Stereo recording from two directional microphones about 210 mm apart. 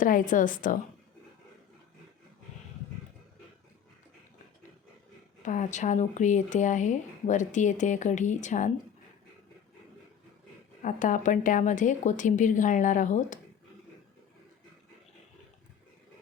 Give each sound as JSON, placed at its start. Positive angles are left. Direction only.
{"t": 0.0, "sound": "speech", "side_deg": 40}
{"t": 5.4, "sound": "speech", "side_deg": 35}
{"t": 10.8, "sound": "speech", "side_deg": 40}